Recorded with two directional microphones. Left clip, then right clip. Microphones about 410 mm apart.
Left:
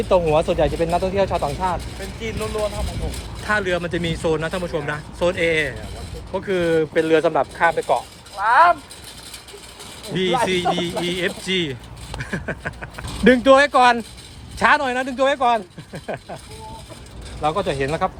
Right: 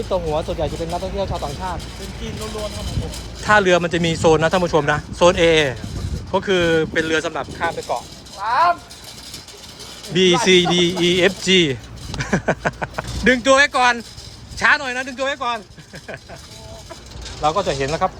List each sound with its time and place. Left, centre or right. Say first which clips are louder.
0.1 s speech: left 5 dB; left
3.4 s speech: right 7 dB; centre; by 8.7 s left
10.2 s speech: right 6 dB; centre
13.2 s speech: left 1 dB; centre
17.4 s speech: right 2 dB; centre